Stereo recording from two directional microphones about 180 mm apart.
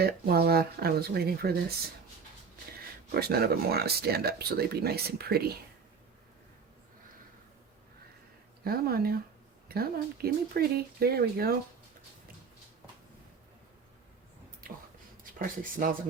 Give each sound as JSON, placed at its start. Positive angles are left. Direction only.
{"t": 0.0, "sound": "speech", "side_deg": -60}
{"t": 3.1, "sound": "speech", "side_deg": -60}
{"t": 8.6, "sound": "speech", "side_deg": -55}
{"t": 14.6, "sound": "a sound", "side_deg": -50}
{"t": 15.2, "sound": "speech", "side_deg": -50}